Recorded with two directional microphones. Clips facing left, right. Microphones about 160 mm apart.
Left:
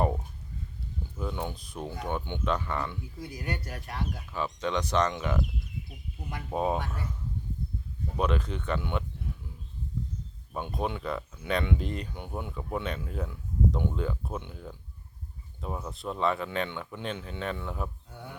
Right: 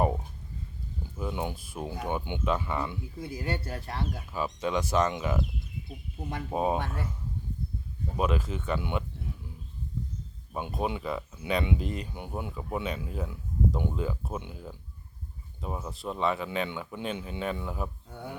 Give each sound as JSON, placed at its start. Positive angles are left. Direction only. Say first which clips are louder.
{"t": 1.1, "sound": "speech", "louder": "right 1 dB", "side_deg": -10}
{"t": 3.2, "sound": "speech", "louder": "right 3 dB", "side_deg": -25}
{"t": 4.6, "sound": "speech", "louder": "right 1 dB", "side_deg": -5}
{"t": 6.5, "sound": "speech", "louder": "even", "side_deg": -10}
{"t": 8.1, "sound": "speech", "louder": "even", "side_deg": -5}
{"t": 10.5, "sound": "speech", "louder": "right 1 dB", "side_deg": -5}